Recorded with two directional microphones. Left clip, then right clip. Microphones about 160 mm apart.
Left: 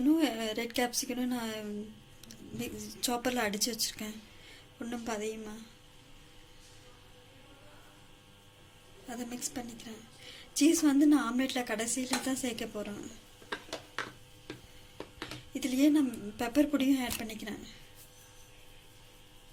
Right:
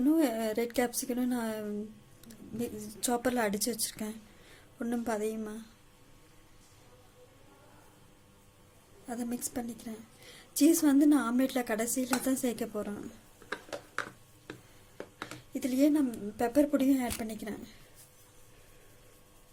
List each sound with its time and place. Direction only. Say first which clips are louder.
0.2 s a woman's voice: right 2 dB; 65° right (ahead or behind)
4.9 s a woman's voice: right 3 dB; 65° right (ahead or behind)
9.0 s a woman's voice: right 2 dB; 65° right (ahead or behind)
15.5 s a woman's voice: even; 60° right (ahead or behind)